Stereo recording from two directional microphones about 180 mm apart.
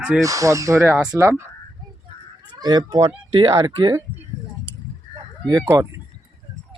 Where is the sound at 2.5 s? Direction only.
25° right (ahead or behind).